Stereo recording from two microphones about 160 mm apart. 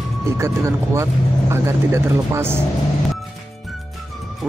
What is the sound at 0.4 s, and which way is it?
Speech, 20° right (ahead or behind).